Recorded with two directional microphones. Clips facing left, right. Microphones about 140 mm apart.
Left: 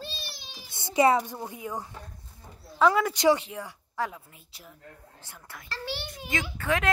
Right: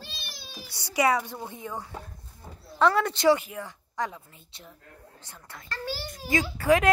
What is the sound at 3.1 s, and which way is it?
Speech, 15° left (ahead or behind).